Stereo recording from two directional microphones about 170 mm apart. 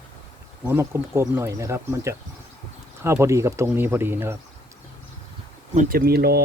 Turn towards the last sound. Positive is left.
turn(degrees=-65)  # may be behind; listen again after turning